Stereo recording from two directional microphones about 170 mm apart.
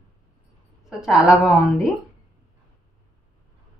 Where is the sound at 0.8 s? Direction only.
5° right (ahead or behind).